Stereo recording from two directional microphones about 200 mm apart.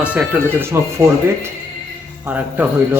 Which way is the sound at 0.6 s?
15° right (ahead or behind).